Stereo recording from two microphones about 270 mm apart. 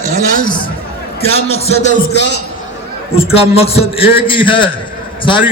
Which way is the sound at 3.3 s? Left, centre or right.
Left.